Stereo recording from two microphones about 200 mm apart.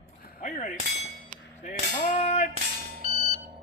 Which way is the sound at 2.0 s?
35° left (ahead or behind).